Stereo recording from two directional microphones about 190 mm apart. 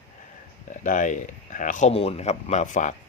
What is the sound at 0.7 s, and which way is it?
Speech, 40° left (ahead or behind).